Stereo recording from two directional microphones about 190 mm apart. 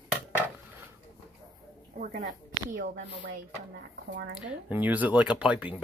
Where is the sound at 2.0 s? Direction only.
45° right (ahead or behind).